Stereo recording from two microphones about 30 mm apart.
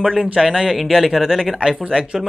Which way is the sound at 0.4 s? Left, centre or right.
Centre.